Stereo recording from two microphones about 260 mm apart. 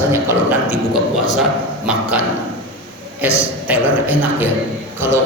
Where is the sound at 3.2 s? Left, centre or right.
Centre.